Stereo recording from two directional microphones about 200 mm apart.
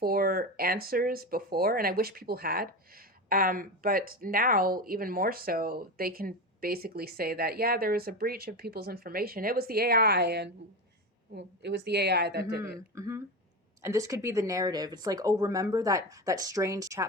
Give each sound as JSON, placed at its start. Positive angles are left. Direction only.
{"t": 0.0, "sound": "a woman's voice", "side_deg": -45}
{"t": 12.6, "sound": "speech", "side_deg": -15}